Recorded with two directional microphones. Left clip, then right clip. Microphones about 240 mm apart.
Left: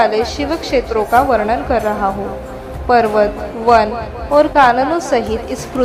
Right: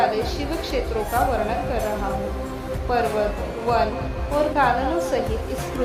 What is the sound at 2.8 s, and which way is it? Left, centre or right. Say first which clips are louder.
Speech: left 10 dB; centre.